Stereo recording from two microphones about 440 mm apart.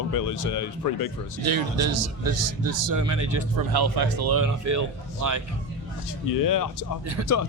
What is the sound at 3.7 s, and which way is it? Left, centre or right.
Speech, right.